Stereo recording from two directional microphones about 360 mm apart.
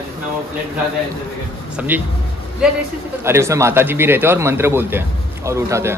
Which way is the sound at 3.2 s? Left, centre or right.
Centre.